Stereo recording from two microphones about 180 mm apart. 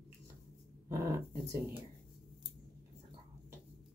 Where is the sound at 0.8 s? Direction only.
15° right (ahead or behind).